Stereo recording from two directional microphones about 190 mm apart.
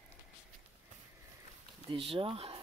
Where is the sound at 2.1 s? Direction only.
30° right (ahead or behind).